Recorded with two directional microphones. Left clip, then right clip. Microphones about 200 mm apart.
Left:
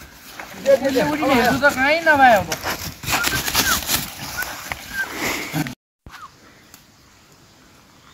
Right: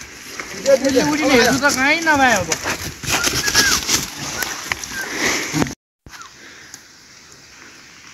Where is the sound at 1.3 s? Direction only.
60° left (ahead or behind).